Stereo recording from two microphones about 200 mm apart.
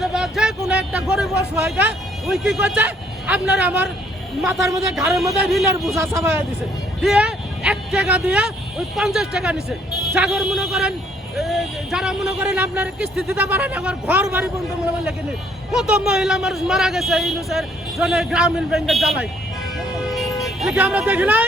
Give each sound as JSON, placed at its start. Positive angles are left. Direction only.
{"t": 0.0, "sound": "a man's voice", "side_deg": 0}
{"t": 4.9, "sound": "a man's voice", "side_deg": -15}
{"t": 7.0, "sound": "a man's voice", "side_deg": 0}
{"t": 15.7, "sound": "a man's voice", "side_deg": -5}
{"t": 20.4, "sound": "speech", "side_deg": 0}